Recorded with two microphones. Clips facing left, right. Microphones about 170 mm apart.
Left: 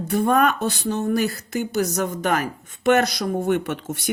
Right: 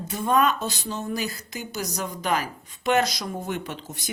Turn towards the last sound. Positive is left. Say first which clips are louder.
# left 8 dB
turn(degrees=65)  # may be behind; listen again after turning